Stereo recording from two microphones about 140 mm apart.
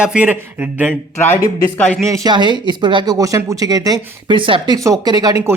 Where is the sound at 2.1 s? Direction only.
30° right (ahead or behind).